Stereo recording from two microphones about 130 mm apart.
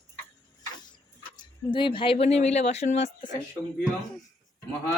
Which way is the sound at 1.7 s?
40° left (ahead or behind).